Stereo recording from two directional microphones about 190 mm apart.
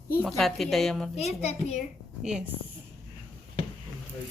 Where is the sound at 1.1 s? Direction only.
35° left (ahead or behind).